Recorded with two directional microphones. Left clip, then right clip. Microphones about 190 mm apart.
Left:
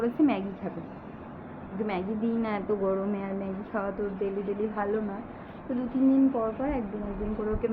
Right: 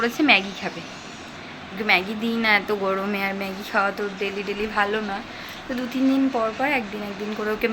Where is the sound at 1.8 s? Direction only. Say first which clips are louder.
Right 11 dB; centre (ahead or behind).